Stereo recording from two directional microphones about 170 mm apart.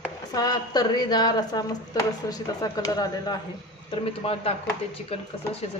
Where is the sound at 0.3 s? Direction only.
25° left (ahead or behind).